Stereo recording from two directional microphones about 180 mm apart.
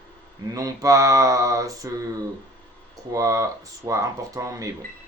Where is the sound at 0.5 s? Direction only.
20° right (ahead or behind).